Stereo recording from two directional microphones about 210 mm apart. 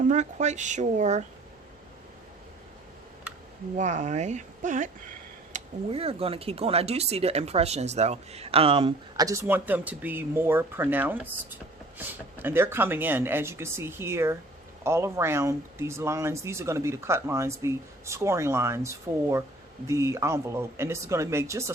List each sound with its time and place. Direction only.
0.0 s speech: 35° right (ahead or behind)
3.8 s speech: 35° right (ahead or behind); by 21.7 s 15° right (ahead or behind)